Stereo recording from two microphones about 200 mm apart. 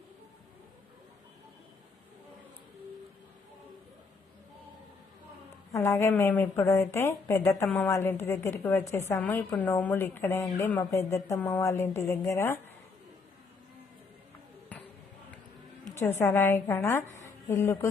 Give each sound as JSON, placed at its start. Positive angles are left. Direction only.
{"t": 5.7, "sound": "a woman's voice", "side_deg": 15}
{"t": 14.7, "sound": "a sound", "side_deg": 5}
{"t": 16.0, "sound": "a woman's voice", "side_deg": 10}